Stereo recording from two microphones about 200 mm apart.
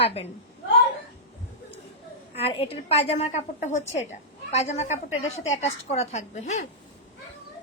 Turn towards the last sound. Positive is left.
turn(degrees=35)  # may be behind; listen again after turning